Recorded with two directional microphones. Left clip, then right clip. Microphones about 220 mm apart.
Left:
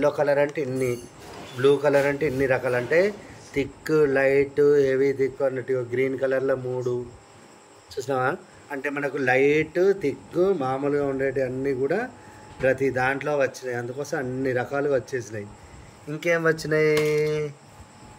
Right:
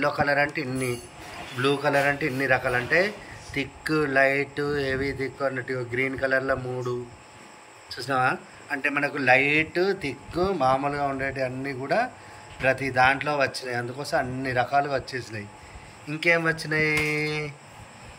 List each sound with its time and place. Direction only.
0.0 s a man's voice: 10° left (ahead or behind)